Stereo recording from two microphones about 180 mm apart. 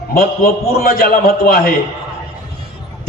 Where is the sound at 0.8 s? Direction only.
55° left (ahead or behind).